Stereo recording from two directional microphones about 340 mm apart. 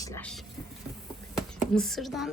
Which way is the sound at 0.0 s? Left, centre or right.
Centre.